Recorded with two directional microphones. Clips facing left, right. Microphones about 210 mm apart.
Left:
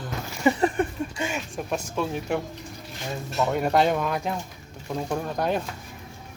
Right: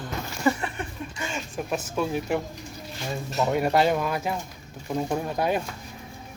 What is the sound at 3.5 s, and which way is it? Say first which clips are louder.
Speech: even; 5° right (ahead or behind).